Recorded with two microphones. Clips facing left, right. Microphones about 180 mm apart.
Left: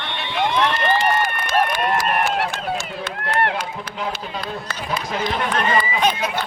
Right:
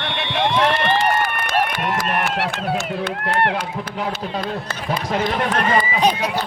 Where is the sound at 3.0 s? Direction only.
60° right (ahead or behind).